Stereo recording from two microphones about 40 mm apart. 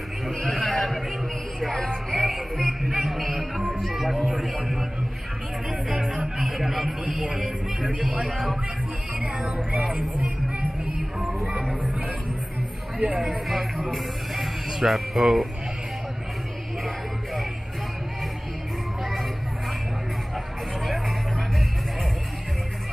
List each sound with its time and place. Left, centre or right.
0.4 s a sound: left
1.8 s music: left
2.5 s music: centre
3.5 s music: centre
5.9 s music: right
6.5 s a sound: centre
8.0 s speech: centre
9.2 s music: right
13.0 s speech: right
13.5 s speech: centre